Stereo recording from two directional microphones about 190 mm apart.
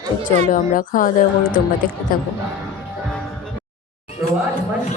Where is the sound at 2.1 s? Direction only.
50° left (ahead or behind).